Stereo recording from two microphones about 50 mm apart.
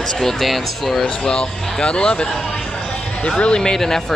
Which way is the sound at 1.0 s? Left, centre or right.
Centre.